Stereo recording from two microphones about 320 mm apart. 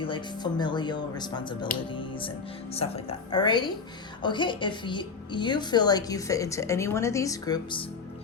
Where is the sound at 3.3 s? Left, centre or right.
Centre.